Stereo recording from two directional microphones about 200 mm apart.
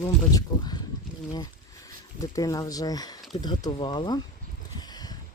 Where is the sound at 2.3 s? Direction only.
15° left (ahead or behind).